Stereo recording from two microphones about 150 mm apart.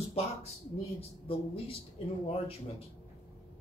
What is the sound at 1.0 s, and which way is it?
Speech, 40° left (ahead or behind).